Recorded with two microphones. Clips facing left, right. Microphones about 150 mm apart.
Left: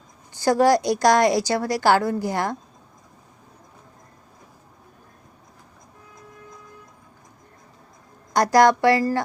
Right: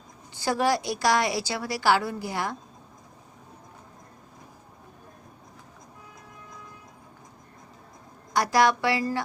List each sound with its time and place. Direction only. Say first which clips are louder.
0.6 s a woman's voice: left 7 dB; 45° left (ahead or behind)
8.4 s a woman's voice: left 6 dB; 45° left (ahead or behind)